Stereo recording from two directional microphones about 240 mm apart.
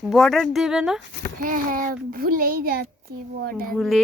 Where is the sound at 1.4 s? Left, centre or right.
Right.